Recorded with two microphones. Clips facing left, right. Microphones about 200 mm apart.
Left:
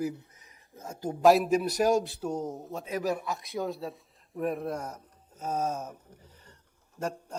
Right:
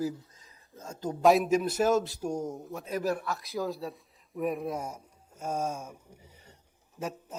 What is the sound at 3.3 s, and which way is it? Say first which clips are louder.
A man's voice: even; centre (ahead or behind).